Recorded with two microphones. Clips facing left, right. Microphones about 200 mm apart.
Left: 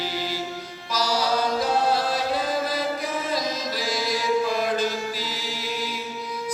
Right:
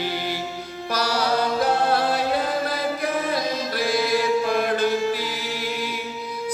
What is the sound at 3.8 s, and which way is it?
Mantra, 60° right (ahead or behind).